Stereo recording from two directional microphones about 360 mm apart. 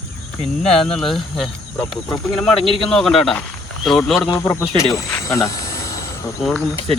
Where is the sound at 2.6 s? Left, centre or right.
Centre.